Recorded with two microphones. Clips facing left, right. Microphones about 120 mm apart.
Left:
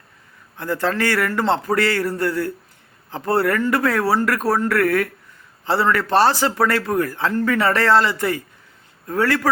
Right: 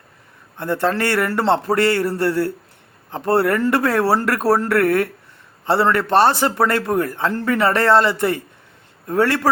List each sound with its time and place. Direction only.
0.5 s speech: 25° right (ahead or behind)